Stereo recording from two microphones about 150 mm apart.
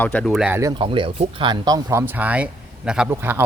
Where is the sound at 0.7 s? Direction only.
35° right (ahead or behind).